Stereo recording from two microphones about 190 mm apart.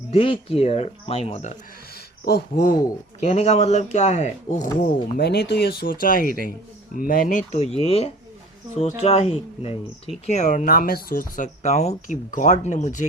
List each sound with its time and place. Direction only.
0.1 s speech: 30° left (ahead or behind)
2.2 s speech: 50° left (ahead or behind)
3.2 s speech: 35° left (ahead or behind)
5.1 s speech: 60° left (ahead or behind); by 13.1 s 40° left (ahead or behind)